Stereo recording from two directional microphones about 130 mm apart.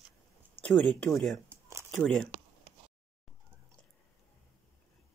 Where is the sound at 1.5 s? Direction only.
20° right (ahead or behind).